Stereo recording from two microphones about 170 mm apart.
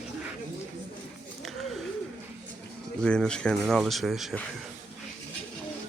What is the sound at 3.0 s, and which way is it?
Speech, 5° left (ahead or behind).